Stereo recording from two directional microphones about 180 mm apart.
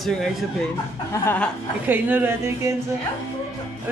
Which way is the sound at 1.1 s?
10° left (ahead or behind).